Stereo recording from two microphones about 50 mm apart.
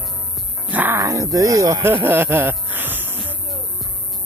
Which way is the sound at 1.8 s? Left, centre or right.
Right.